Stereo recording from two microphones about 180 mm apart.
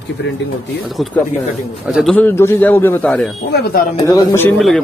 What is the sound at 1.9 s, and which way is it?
A man's voice, centre (ahead or behind).